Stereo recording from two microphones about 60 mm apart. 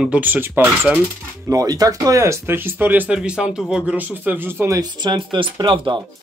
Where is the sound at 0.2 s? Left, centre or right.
Right.